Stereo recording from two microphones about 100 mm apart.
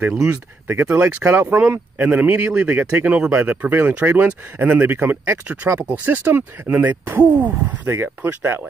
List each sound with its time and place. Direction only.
0.2 s speech: 30° right (ahead or behind)